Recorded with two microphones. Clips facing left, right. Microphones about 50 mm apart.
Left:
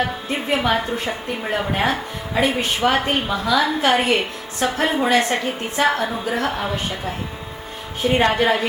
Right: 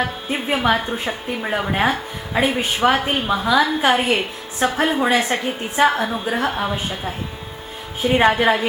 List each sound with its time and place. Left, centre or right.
0.5 s speech: centre
3.2 s a woman's voice: centre